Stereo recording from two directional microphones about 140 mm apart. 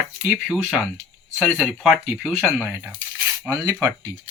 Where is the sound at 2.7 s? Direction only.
15° right (ahead or behind).